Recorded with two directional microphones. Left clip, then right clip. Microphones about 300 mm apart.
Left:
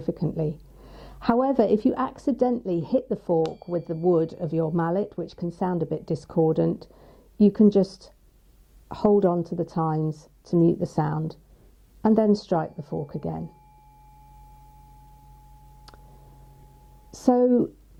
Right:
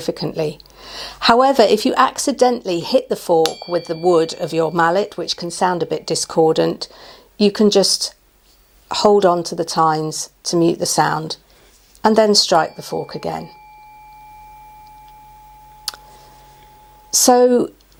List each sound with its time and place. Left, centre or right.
0.0 s speech: centre
17.1 s speech: centre
17.4 s speech: centre